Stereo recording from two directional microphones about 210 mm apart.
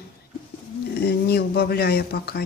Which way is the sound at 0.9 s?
50° left (ahead or behind).